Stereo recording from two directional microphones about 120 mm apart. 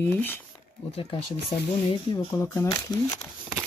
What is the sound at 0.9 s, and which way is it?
Speech, 55° left (ahead or behind).